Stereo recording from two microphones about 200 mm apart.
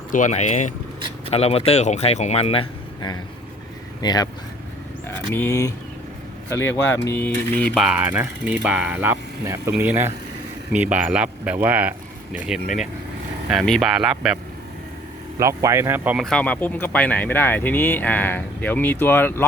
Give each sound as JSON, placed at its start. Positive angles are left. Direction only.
{"t": 0.1, "sound": "speech", "side_deg": 35}
{"t": 5.3, "sound": "speech", "side_deg": 10}
{"t": 15.4, "sound": "speech", "side_deg": -15}
{"t": 16.2, "sound": "speech", "side_deg": 5}